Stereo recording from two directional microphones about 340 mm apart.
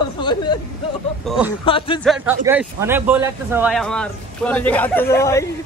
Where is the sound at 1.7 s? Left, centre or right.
Centre.